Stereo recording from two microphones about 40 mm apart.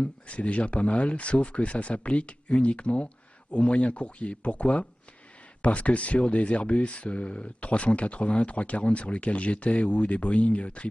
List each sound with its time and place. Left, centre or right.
0.0 s speech: left